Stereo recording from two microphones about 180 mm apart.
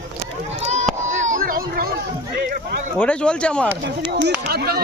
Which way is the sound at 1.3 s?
50° right (ahead or behind).